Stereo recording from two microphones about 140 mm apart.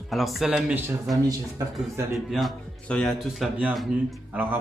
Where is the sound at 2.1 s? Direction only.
Centre (ahead or behind).